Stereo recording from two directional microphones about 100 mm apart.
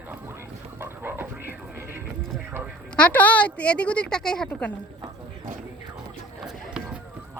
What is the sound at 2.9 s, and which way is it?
A woman's voice, 15° left (ahead or behind).